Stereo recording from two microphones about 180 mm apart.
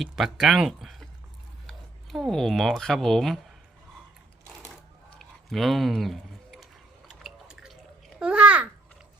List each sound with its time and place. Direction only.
0.0 s speech: centre (ahead or behind)
5.5 s speech: centre (ahead or behind)
7.1 s drip: centre (ahead or behind)
8.2 s babbling: 5° right (ahead or behind)